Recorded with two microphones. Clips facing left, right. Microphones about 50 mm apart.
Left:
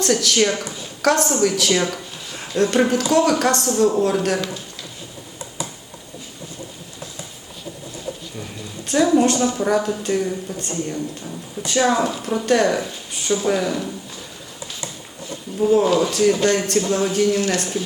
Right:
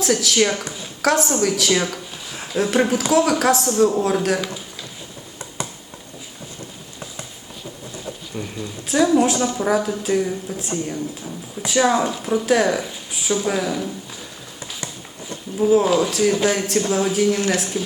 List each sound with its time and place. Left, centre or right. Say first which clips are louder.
0.0 s speech: even; centre
8.4 s a sound: right 4 dB; right
8.9 s speech: even; centre
15.5 s speech: even; centre